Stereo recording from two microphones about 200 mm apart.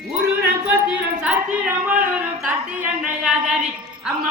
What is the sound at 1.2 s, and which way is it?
A woman's voice, 5° right (ahead or behind).